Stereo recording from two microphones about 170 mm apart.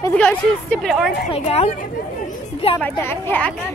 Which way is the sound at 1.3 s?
35° left (ahead or behind).